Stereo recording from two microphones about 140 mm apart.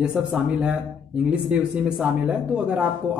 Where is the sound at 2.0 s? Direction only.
5° right (ahead or behind).